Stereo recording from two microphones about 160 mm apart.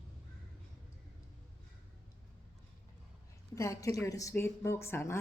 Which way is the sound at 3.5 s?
20° left (ahead or behind).